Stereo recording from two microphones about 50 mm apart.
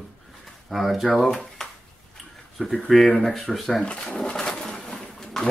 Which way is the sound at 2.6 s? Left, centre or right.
Left.